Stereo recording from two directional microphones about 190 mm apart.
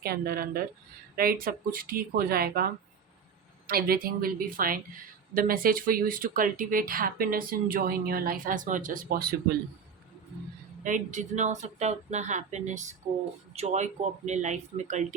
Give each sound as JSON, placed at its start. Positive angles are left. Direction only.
{"t": 0.0, "sound": "speech", "side_deg": -55}
{"t": 3.7, "sound": "speech", "side_deg": -50}
{"t": 10.8, "sound": "speech", "side_deg": -40}